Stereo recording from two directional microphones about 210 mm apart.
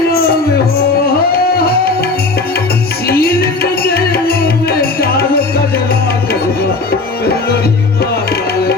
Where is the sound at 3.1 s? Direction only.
50° left (ahead or behind).